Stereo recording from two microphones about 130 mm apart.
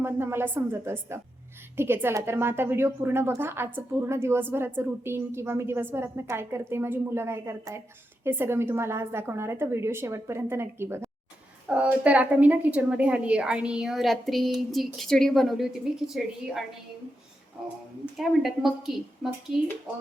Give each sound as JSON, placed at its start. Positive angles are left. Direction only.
{"t": 0.0, "sound": "a woman's voice", "side_deg": -20}
{"t": 18.2, "sound": "a woman's voice", "side_deg": 0}